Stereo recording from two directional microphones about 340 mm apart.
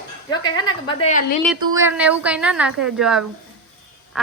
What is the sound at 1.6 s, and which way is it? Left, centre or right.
A woman's voice, centre.